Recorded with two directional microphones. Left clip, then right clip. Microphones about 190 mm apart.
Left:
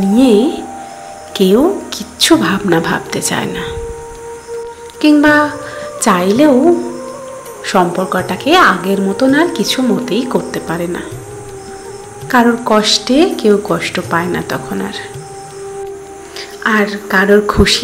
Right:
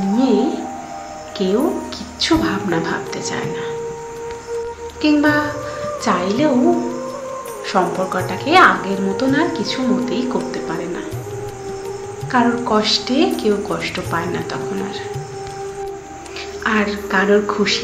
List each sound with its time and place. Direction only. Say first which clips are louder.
0.1 s music: left 7 dB; 50° left (ahead or behind)
1.3 s a woman's voice: left 8 dB; 45° left (ahead or behind)
5.0 s a woman's voice: left 7 dB; 45° left (ahead or behind)
7.6 s a woman's voice: left 5 dB; 40° left (ahead or behind)
12.3 s a woman's voice: left 6 dB; 40° left (ahead or behind)
16.6 s speech: left 5 dB; 40° left (ahead or behind)